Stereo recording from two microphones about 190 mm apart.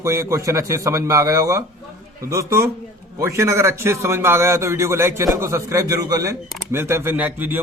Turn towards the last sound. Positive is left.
turn(degrees=-10)  # may be behind; listen again after turning